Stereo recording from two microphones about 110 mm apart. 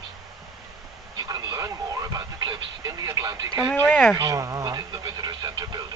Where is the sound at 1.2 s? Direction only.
35° right (ahead or behind).